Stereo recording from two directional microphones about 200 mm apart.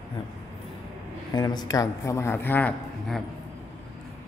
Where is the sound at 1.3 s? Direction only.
20° left (ahead or behind); by 3.2 s 5° left (ahead or behind).